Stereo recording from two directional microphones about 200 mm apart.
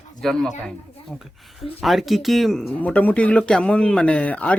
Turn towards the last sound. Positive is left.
turn(degrees=5)  # may be behind; listen again after turning